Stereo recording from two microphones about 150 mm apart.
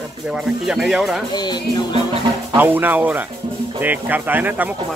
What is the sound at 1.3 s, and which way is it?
Speech, 30° left (ahead or behind).